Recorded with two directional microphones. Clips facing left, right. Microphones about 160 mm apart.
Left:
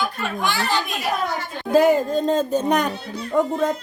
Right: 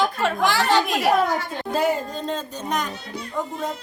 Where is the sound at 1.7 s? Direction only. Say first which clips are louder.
Left 7 dB; 50° left (ahead or behind).